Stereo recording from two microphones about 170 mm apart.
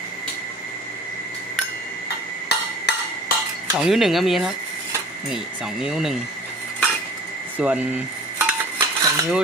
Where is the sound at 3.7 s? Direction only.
5° right (ahead or behind).